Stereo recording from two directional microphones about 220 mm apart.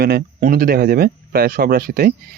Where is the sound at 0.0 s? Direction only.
40° right (ahead or behind).